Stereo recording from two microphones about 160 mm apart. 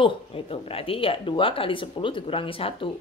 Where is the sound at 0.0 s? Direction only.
35° left (ahead or behind).